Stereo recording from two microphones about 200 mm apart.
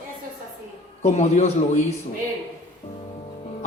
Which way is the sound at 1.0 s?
35° left (ahead or behind).